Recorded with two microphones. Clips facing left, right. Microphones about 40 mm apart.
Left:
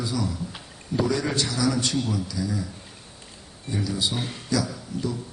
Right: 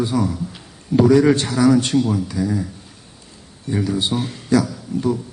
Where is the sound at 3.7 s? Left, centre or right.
Right.